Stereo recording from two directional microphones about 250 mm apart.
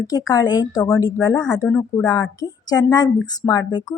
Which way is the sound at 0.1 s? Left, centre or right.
Centre.